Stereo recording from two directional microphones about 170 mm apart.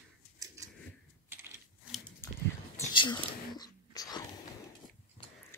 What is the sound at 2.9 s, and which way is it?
Whispering, 25° left (ahead or behind).